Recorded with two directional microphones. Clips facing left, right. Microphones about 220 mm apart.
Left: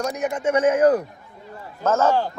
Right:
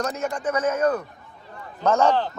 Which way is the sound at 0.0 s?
15° left (ahead or behind).